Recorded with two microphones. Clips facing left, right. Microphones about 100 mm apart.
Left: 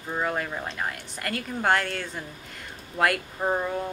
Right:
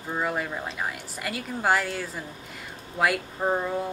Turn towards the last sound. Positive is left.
turn(degrees=0)  # may be behind; listen again after turning